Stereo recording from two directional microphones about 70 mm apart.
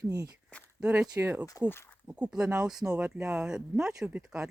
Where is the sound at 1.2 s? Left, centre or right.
Right.